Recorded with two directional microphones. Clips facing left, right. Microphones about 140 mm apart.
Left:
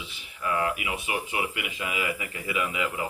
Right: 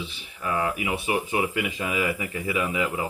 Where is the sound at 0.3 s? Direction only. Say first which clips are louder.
Right 1 dB; 30° right (ahead or behind).